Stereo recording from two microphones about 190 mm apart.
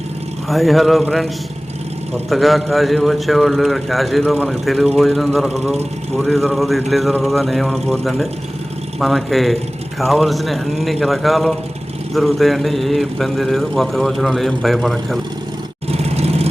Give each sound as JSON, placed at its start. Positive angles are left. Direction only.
{"t": 0.4, "sound": "a man's voice", "side_deg": 0}
{"t": 2.3, "sound": "a man's voice", "side_deg": 0}
{"t": 15.9, "sound": "vehicle", "side_deg": -35}